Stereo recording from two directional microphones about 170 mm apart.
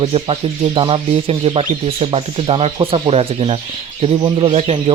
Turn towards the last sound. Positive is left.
turn(degrees=-35)  # may be behind; listen again after turning